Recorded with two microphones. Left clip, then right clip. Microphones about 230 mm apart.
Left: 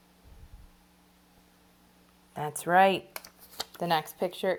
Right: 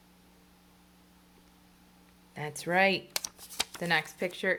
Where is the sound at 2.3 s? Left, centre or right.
Centre.